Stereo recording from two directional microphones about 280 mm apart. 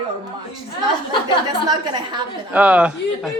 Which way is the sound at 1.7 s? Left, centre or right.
Centre.